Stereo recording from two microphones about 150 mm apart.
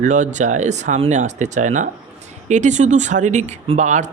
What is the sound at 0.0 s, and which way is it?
Speech, 55° right (ahead or behind).